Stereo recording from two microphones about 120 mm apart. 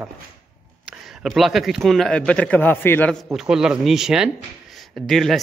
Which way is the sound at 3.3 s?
5° right (ahead or behind).